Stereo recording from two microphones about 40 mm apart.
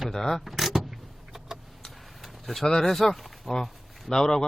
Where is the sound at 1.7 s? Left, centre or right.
Centre.